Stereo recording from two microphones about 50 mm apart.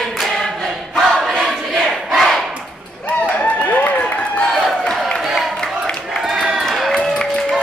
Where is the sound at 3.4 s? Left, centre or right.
Left.